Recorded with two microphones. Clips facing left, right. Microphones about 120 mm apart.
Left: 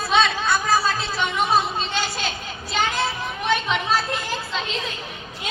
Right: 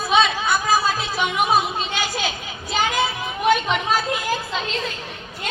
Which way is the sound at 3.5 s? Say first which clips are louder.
Right 1 dB; 5° right (ahead or behind).